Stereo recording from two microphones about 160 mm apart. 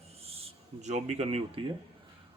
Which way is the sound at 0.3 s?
45° right (ahead or behind).